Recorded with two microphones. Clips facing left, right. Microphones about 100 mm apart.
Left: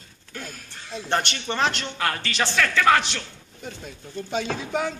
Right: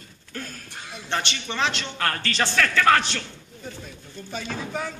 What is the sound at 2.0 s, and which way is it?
Speech, 15° left (ahead or behind).